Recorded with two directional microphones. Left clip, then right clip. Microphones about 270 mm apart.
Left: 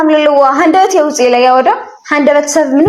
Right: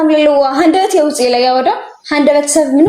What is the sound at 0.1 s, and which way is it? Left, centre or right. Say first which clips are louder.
A woman's voice: left 4 dB; centre.